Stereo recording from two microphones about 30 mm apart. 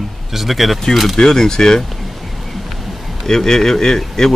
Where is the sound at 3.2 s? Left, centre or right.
Centre.